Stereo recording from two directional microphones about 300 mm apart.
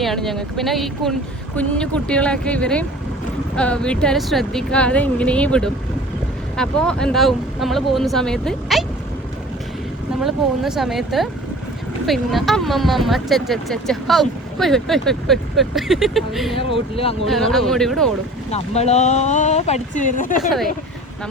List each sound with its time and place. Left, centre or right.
0.0 s speech: centre
10.2 s speech: centre
16.6 s speech: centre
17.2 s speech: centre
18.5 s speech: left